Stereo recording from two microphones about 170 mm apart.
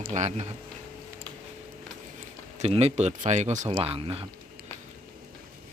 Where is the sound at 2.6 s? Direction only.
35° right (ahead or behind).